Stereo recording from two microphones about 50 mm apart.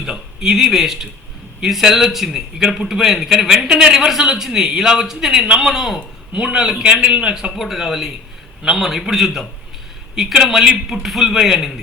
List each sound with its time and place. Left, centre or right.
0.0 s a man's voice: centre
6.3 s a man's voice: centre
7.5 s a man's voice: centre